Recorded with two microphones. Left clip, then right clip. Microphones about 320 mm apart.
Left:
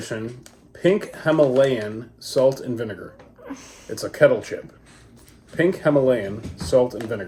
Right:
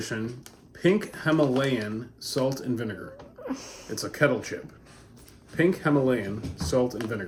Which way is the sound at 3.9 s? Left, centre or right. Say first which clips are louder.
Left 8 dB; centre.